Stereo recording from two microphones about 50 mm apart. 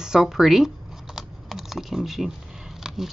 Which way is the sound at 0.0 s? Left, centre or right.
Centre.